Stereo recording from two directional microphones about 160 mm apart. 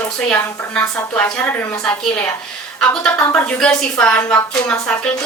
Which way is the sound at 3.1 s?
15° left (ahead or behind).